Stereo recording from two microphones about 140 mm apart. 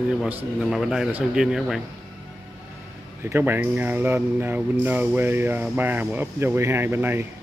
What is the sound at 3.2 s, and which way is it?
Speech, 15° right (ahead or behind).